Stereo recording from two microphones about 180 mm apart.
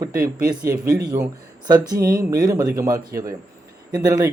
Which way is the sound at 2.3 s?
20° right (ahead or behind).